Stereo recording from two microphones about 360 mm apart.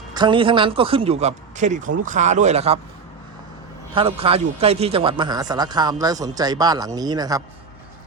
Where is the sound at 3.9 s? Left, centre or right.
Centre.